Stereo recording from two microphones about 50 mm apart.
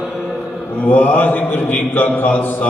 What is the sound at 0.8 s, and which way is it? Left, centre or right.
A man's voice, left.